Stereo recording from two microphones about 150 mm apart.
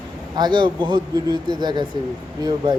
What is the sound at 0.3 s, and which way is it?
A man's voice, 30° right (ahead or behind).